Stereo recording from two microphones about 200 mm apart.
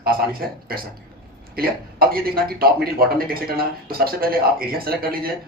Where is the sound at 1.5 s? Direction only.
50° right (ahead or behind).